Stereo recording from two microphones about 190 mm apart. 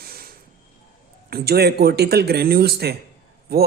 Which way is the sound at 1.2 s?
55° right (ahead or behind).